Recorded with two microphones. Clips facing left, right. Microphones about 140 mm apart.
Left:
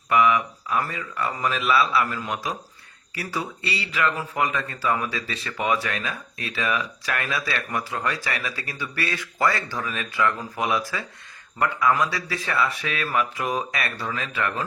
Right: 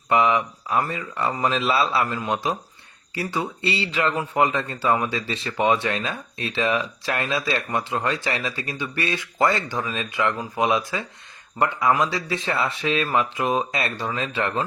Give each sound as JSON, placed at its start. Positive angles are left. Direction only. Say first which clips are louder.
{"t": 0.1, "sound": "speech", "louder": "even", "side_deg": -25}